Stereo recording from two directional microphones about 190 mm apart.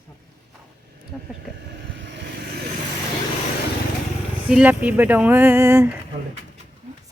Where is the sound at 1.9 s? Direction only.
70° right (ahead or behind).